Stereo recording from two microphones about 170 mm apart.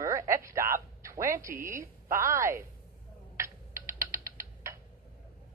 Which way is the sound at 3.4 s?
15° right (ahead or behind).